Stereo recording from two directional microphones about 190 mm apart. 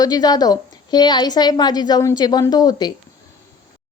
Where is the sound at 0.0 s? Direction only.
20° left (ahead or behind).